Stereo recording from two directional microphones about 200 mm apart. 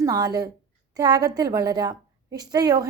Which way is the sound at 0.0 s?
20° right (ahead or behind).